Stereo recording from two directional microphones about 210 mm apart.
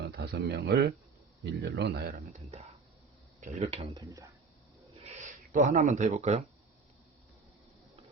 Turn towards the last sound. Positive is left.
turn(degrees=-35)  # may be behind; listen again after turning